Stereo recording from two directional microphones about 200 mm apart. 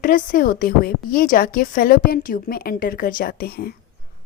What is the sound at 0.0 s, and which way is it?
A woman's voice, 45° left (ahead or behind).